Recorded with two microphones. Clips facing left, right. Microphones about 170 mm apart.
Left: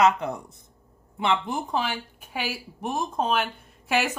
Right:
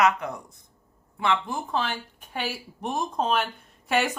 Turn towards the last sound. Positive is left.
turn(degrees=0)  # may be behind; listen again after turning